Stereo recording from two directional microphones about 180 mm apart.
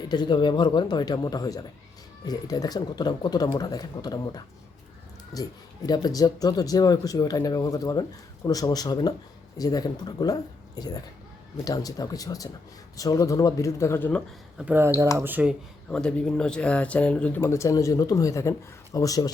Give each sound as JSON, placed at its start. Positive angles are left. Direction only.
{"t": 0.1, "sound": "speech", "side_deg": 25}
{"t": 14.6, "sound": "speech", "side_deg": -10}
{"t": 15.9, "sound": "speech", "side_deg": 5}